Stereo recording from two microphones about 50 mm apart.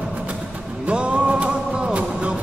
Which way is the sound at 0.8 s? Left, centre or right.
Right.